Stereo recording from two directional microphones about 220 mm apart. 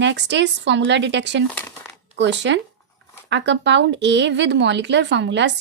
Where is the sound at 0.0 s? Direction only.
55° right (ahead or behind).